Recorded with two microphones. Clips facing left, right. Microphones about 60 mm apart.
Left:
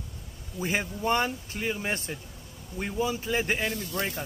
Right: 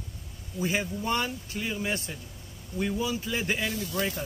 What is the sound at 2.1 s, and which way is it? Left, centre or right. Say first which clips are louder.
Speech: left 2 dB; left.